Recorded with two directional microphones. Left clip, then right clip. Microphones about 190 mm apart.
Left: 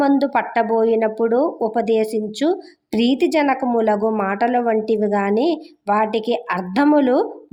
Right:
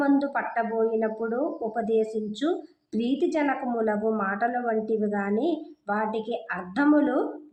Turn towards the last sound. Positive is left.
turn(degrees=30)  # may be behind; listen again after turning